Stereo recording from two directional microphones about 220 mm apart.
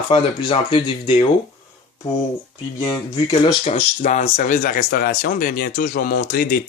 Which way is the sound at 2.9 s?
20° left (ahead or behind).